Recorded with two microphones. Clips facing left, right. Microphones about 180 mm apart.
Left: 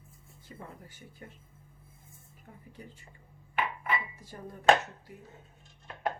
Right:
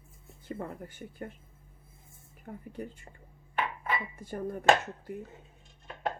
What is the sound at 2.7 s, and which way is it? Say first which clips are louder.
Speech: right 9 dB; 55° right (ahead or behind).